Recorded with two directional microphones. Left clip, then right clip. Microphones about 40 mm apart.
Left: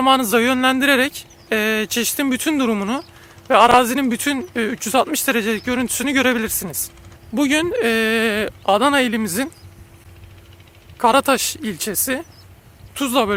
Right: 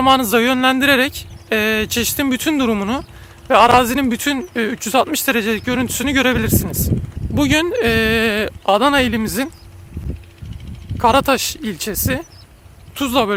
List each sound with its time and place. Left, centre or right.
0.0 s speech: centre
7.3 s speech: centre
10.9 s speech: left